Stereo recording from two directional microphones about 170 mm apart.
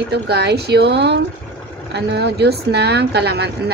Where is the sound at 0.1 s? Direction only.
75° right (ahead or behind).